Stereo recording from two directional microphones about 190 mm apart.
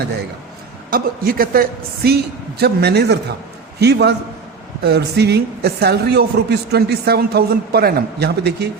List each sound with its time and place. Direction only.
0.9 s a woman's voice: 50° right (ahead or behind)